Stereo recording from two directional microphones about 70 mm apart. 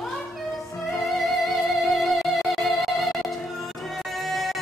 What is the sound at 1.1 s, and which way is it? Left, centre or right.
Music, centre.